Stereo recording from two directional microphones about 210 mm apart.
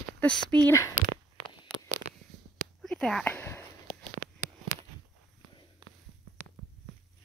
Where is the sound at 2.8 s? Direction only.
5° left (ahead or behind).